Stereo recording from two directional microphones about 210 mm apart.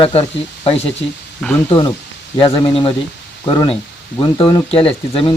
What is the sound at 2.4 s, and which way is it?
Speech, 25° left (ahead or behind).